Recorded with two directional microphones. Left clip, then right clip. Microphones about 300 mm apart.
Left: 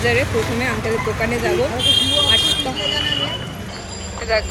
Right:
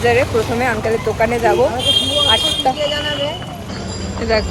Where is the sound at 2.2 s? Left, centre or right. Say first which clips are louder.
Right 2 dB; centre.